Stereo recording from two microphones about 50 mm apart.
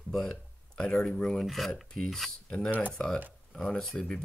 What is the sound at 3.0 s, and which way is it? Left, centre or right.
Speech, left.